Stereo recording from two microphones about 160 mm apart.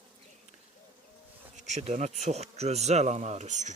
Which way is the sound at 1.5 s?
45° right (ahead or behind).